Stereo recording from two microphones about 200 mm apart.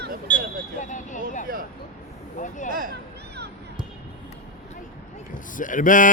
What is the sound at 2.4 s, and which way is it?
Speech, 40° left (ahead or behind).